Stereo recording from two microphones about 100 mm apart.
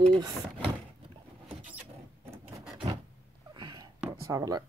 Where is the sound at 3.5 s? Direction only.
45° right (ahead or behind).